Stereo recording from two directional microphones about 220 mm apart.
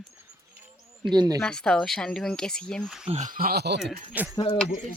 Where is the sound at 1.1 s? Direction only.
20° right (ahead or behind).